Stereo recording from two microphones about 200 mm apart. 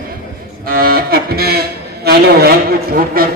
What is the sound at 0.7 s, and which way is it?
A man's voice, 45° right (ahead or behind).